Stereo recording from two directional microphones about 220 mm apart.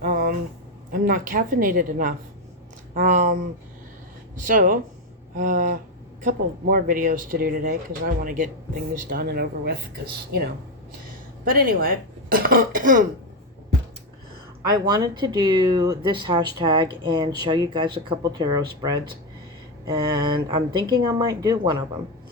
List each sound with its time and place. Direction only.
0.0 s a sound: 40° right (ahead or behind)
0.9 s speech: 40° right (ahead or behind)
4.4 s speech: 40° right (ahead or behind)
11.4 s speech: 40° right (ahead or behind)
14.7 s speech: 15° right (ahead or behind)